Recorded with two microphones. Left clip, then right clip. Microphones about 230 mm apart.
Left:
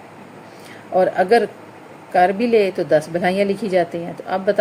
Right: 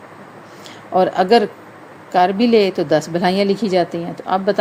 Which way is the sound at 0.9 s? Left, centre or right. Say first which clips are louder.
Right 1 dB; centre.